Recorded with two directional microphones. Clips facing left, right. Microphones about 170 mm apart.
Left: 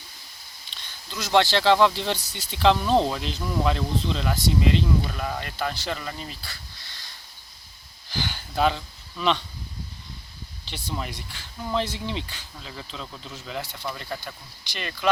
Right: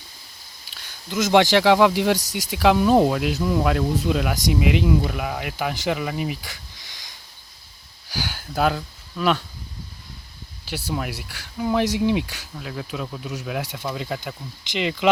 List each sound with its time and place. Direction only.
0.7 s a sound: 5° right (ahead or behind)
1.1 s speech: 20° right (ahead or behind)
8.1 s speech: 5° right (ahead or behind)
10.7 s speech: 5° right (ahead or behind)